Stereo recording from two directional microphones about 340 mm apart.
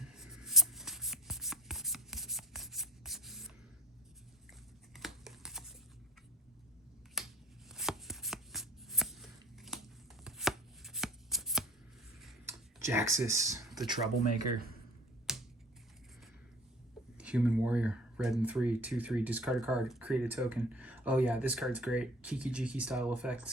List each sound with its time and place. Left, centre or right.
0.1 s writing: centre
4.9 s a sound: centre
7.2 s scissors: centre
7.7 s shuffling cards: centre
10.2 s chopping: centre
12.2 s a sound: centre
15.3 s typewriter: centre
17.2 s speech: centre